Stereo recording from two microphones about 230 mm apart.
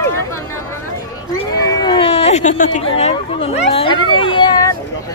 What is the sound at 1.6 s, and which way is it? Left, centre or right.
Speech, left.